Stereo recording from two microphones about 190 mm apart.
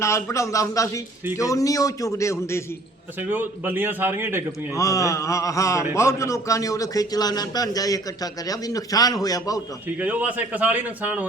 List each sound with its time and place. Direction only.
0.0 s a man's voice: 15° left (ahead or behind)
3.2 s a man's voice: 10° right (ahead or behind)
4.8 s a man's voice: 15° left (ahead or behind)
10.0 s a man's voice: 10° right (ahead or behind)